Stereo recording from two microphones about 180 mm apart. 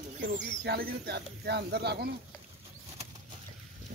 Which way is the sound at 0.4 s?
65° right (ahead or behind).